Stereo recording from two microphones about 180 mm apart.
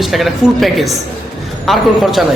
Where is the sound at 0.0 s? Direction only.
Centre (ahead or behind).